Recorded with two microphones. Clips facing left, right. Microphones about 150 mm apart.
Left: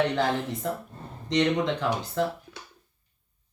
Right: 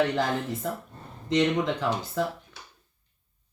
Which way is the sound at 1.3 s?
Centre (ahead or behind).